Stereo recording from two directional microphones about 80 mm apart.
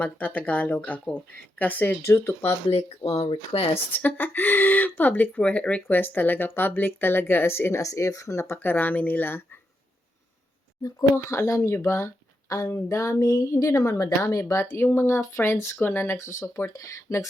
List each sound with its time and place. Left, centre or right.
0.0 s speech: left
2.0 s speech: left
3.9 s speech: left
10.8 s speech: left
16.7 s speech: left